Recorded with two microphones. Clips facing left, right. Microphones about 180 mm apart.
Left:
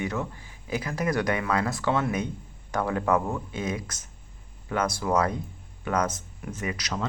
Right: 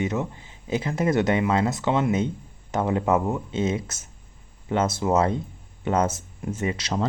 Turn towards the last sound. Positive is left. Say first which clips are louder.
# right 5 dB
turn(degrees=-30)  # may be behind; listen again after turning